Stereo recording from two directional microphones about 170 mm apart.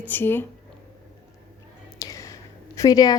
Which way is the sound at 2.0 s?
20° left (ahead or behind).